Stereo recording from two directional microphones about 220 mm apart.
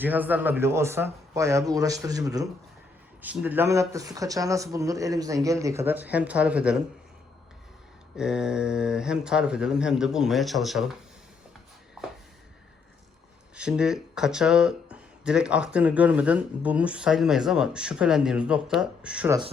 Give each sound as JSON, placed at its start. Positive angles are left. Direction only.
{"t": 0.0, "sound": "speech", "side_deg": -10}
{"t": 8.1, "sound": "speech", "side_deg": -5}
{"t": 13.6, "sound": "speech", "side_deg": -5}